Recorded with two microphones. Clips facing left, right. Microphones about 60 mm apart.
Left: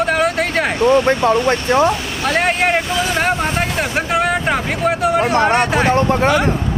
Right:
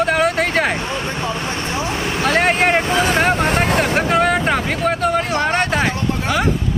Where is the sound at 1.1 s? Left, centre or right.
Left.